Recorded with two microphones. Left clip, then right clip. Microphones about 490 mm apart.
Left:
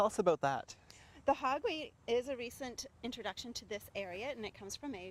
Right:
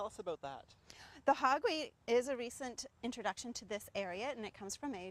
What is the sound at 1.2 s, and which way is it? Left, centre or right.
A woman's voice, right.